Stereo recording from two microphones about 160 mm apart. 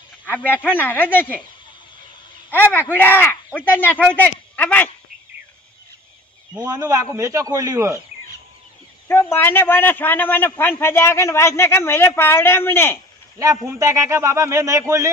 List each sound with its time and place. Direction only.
0.2 s a man's voice: 10° left (ahead or behind)
2.5 s a man's voice: 10° left (ahead or behind)
6.6 s a man's voice: 20° right (ahead or behind)
9.0 s a man's voice: 15° left (ahead or behind)
13.4 s a man's voice: 20° right (ahead or behind)